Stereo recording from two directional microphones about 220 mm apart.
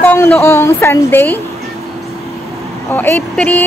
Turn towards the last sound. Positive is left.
turn(degrees=5)  # may be behind; listen again after turning